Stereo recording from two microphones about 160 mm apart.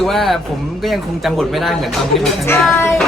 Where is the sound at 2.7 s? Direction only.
15° left (ahead or behind).